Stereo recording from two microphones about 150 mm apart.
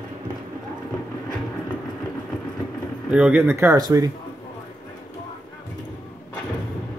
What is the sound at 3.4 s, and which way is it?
Speech, 20° right (ahead or behind).